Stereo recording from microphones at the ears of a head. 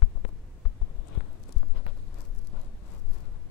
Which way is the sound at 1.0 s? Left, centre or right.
Left.